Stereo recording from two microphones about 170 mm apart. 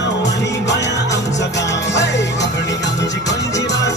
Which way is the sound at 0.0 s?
90° left.